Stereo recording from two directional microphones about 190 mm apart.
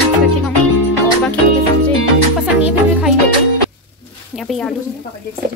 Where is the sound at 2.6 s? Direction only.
5° right (ahead or behind).